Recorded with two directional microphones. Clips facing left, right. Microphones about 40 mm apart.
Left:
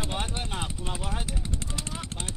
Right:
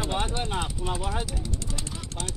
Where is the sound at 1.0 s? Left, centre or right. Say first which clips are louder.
Right 4 dB; centre.